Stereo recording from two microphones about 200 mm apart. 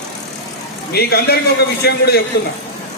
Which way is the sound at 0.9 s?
55° left (ahead or behind).